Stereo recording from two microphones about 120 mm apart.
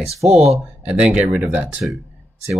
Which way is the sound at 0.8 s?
10° right (ahead or behind).